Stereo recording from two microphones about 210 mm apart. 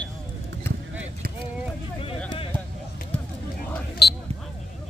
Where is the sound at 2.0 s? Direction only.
25° left (ahead or behind).